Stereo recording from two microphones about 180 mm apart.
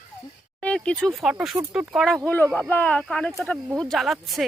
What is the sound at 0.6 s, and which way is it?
Speech, 5° left (ahead or behind).